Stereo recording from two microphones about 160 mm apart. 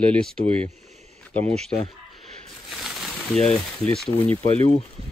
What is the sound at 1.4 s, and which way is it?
Speech, 40° right (ahead or behind).